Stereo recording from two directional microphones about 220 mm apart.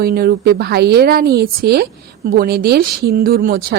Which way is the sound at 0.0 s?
45° right (ahead or behind).